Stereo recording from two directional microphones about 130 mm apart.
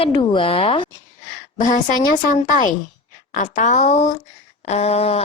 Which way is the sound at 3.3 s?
80° left.